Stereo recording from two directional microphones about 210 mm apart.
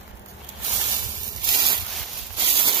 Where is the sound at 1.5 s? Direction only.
20° right (ahead or behind).